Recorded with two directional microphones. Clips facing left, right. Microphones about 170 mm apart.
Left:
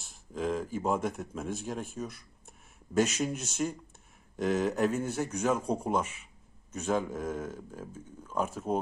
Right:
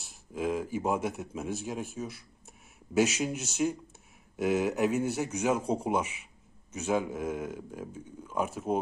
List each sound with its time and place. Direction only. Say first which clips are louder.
0.3 s a man's voice: right 1 dB; 10° right (ahead or behind)